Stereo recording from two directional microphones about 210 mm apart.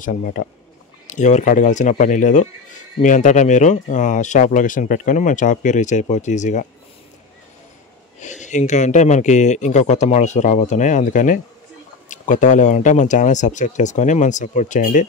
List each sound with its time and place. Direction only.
0.0 s speech: 40° left (ahead or behind)
8.2 s speech: 35° left (ahead or behind)